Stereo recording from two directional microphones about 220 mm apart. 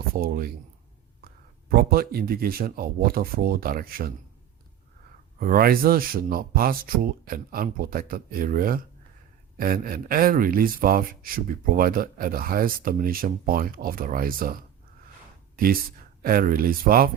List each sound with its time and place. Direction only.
0.1 s speech: 45° right (ahead or behind)
1.2 s a sound: 40° right (ahead or behind)
1.7 s speech: 45° right (ahead or behind)
5.4 s speech: 40° right (ahead or behind)